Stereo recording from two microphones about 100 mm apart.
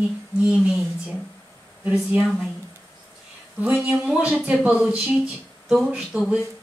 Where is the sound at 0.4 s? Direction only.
10° right (ahead or behind).